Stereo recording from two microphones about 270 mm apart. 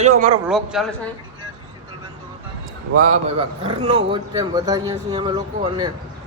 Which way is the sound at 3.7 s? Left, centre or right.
Centre.